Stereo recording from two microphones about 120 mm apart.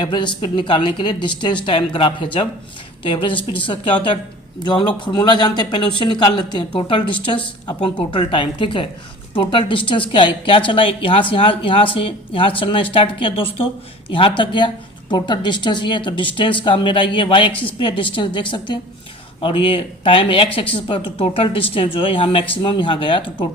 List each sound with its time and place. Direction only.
0.0 s a woman's voice: 40° left (ahead or behind)